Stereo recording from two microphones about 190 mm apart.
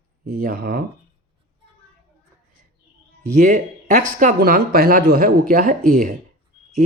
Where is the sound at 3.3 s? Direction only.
45° right (ahead or behind).